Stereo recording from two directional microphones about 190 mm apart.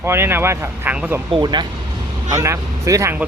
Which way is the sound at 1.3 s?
25° right (ahead or behind).